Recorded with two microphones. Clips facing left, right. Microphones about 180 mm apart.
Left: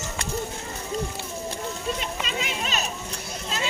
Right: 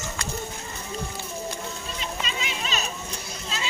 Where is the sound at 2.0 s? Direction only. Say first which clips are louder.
Left 2 dB; 50° left (ahead or behind).